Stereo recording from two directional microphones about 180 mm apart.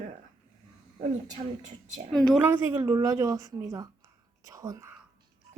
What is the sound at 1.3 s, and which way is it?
Speech, 40° right (ahead or behind).